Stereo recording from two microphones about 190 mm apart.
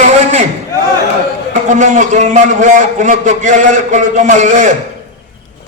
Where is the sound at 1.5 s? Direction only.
40° right (ahead or behind).